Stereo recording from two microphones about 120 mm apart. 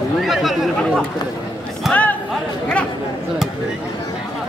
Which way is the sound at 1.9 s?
15° left (ahead or behind).